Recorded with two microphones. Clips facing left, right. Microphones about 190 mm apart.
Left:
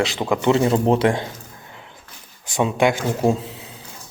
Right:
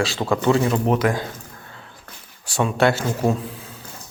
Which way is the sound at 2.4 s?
20° left (ahead or behind).